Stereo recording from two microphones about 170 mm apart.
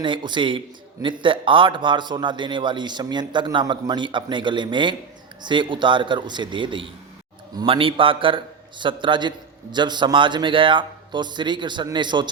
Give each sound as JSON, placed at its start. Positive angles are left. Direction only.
{"t": 0.0, "sound": "a man's voice", "side_deg": -25}